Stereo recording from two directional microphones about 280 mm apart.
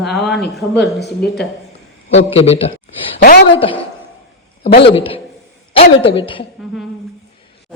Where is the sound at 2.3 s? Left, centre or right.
Left.